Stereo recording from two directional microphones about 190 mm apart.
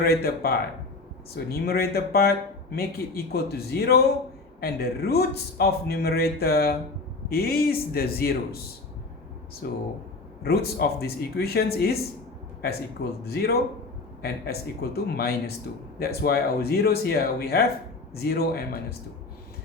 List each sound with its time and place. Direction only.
0.0 s a man's voice: 55° left (ahead or behind)
9.6 s a man's voice: 55° left (ahead or behind)
13.2 s a man's voice: 55° left (ahead or behind)